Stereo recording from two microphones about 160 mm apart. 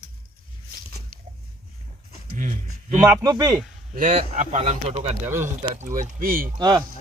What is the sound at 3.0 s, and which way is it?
Speech, 15° right (ahead or behind).